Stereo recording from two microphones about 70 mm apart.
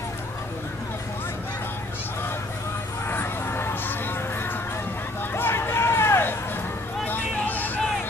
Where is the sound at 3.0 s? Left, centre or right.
Left.